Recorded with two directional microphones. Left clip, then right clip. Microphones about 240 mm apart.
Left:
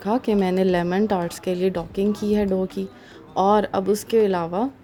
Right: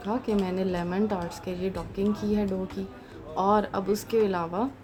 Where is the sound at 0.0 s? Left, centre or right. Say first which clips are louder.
Left 7 dB; left.